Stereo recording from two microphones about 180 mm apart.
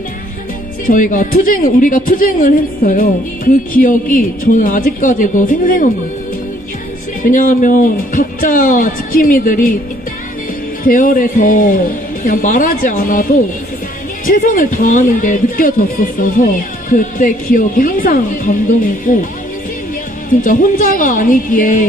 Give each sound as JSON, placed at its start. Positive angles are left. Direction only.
{"t": 0.9, "sound": "speech", "side_deg": 50}
{"t": 7.2, "sound": "speech", "side_deg": 50}
{"t": 10.8, "sound": "speech", "side_deg": 50}
{"t": 20.4, "sound": "speech", "side_deg": 50}